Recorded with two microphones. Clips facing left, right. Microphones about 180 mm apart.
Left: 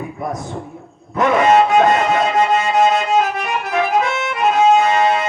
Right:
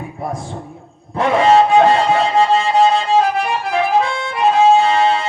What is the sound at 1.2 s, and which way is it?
Music, 30° right (ahead or behind).